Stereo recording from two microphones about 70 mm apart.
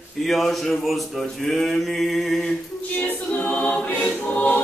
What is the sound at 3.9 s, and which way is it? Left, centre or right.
Choir, centre.